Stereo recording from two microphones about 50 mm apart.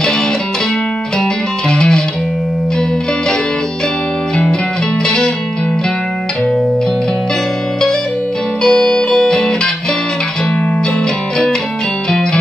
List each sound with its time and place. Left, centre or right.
1.7 s music: centre
5.0 s music: centre
8.6 s music: centre